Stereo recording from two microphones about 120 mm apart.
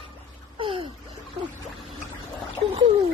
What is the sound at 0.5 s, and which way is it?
Gasp, 45° right (ahead or behind).